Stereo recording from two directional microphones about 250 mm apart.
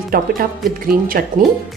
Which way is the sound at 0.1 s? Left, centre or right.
Right.